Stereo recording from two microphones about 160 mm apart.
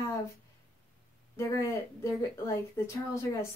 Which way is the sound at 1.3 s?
20° left (ahead or behind).